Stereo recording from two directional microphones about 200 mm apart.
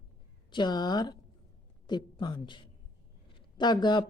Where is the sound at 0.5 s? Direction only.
20° left (ahead or behind).